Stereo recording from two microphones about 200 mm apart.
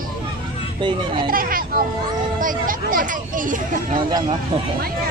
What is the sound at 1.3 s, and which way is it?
A child's voice, 45° right (ahead or behind).